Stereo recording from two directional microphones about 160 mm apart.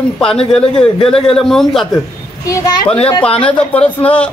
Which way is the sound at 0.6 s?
35° left (ahead or behind).